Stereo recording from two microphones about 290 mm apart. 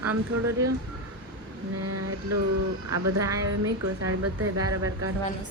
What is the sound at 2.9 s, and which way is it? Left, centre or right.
Speech, right.